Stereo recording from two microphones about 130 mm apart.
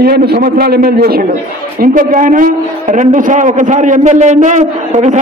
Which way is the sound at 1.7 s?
90° right.